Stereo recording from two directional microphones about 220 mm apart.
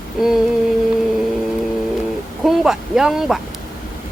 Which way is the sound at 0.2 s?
Centre (ahead or behind).